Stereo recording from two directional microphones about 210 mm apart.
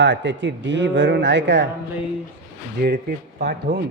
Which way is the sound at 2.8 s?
45° right (ahead or behind).